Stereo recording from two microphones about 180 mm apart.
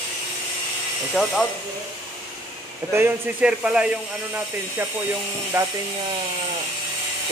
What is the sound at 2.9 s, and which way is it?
Speech, 10° right (ahead or behind).